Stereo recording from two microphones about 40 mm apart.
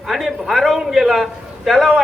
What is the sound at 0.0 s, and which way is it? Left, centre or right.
A man's voice, centre.